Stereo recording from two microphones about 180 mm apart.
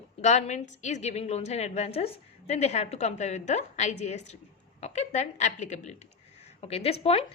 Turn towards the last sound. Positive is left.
turn(degrees=35)  # may be behind; listen again after turning